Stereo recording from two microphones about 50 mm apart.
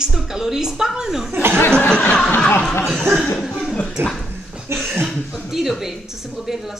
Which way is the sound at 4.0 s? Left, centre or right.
Right.